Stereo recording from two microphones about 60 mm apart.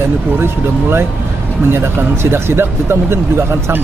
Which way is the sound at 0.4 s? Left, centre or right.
Right.